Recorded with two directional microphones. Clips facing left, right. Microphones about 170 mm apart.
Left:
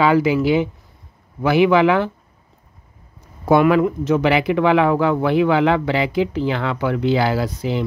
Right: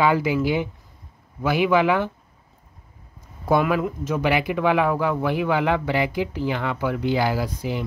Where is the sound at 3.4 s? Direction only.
75° left (ahead or behind).